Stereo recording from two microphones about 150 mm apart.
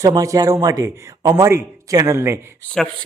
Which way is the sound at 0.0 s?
20° right (ahead or behind).